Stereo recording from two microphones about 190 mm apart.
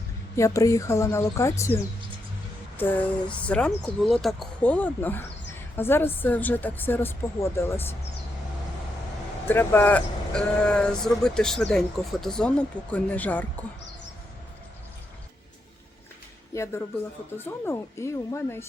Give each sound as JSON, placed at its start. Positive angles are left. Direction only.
{"t": 0.3, "sound": "speech", "side_deg": 15}
{"t": 9.5, "sound": "speech", "side_deg": 10}
{"t": 16.5, "sound": "speech", "side_deg": 15}